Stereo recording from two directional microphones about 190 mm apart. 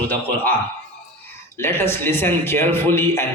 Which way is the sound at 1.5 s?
15° left (ahead or behind).